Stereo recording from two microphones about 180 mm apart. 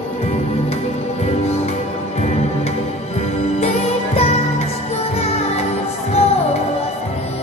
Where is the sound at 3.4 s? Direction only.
35° left (ahead or behind).